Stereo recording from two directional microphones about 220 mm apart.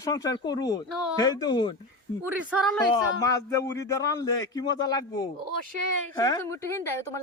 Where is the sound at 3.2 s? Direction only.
15° left (ahead or behind).